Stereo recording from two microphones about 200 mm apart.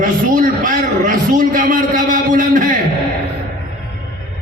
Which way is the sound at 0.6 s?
40° right (ahead or behind).